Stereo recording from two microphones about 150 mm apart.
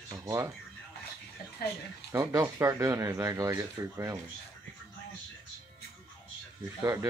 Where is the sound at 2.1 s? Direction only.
20° right (ahead or behind).